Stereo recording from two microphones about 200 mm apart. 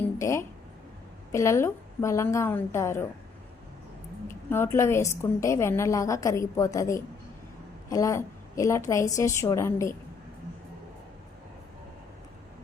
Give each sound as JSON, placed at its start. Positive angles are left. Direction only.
{"t": 0.0, "sound": "a sound", "side_deg": 15}
{"t": 1.3, "sound": "a woman's voice", "side_deg": 15}
{"t": 4.3, "sound": "a woman's voice", "side_deg": 10}